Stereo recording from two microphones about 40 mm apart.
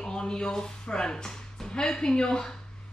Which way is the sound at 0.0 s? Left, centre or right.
Centre.